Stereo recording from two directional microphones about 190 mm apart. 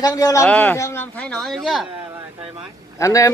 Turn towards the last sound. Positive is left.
turn(degrees=15)  # may be behind; listen again after turning